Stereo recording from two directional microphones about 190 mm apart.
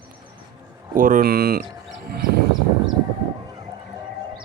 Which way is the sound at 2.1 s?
55° right (ahead or behind).